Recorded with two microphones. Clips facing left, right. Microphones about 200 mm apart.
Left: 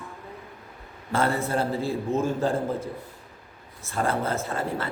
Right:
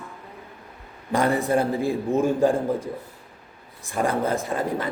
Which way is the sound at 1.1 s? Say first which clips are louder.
Right 4 dB; 15° right (ahead or behind).